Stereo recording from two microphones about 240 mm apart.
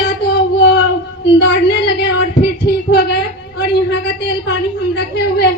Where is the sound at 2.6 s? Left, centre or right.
Left.